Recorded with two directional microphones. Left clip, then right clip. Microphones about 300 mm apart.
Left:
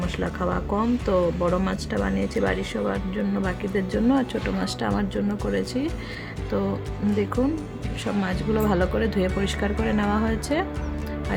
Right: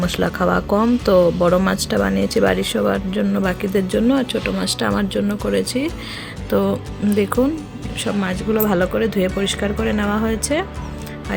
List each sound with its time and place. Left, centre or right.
0.0 s speech: centre
8.0 s speech: centre